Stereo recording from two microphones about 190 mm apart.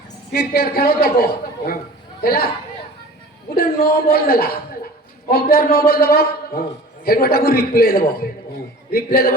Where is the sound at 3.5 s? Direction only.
50° left (ahead or behind).